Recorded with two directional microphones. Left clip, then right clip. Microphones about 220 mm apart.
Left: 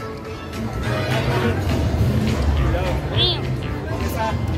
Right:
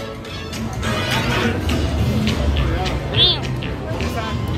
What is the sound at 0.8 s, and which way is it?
Music, 55° right (ahead or behind).